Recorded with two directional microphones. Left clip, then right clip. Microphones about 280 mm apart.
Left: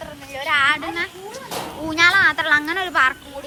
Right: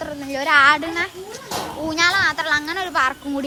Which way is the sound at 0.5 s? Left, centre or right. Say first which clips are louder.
Right 4 dB; centre.